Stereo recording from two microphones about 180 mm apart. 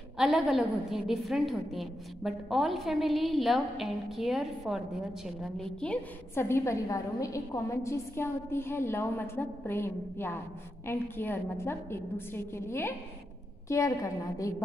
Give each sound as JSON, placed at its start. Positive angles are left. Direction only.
{"t": 0.2, "sound": "a woman's voice", "side_deg": 0}